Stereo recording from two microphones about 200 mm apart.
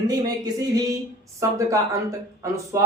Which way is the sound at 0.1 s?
20° right (ahead or behind).